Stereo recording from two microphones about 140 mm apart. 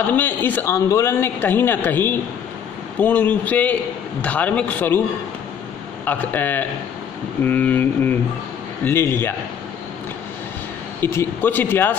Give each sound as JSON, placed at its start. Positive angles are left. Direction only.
{"t": 0.1, "sound": "speech", "side_deg": 15}
{"t": 6.0, "sound": "speech", "side_deg": 15}
{"t": 11.0, "sound": "speech", "side_deg": 15}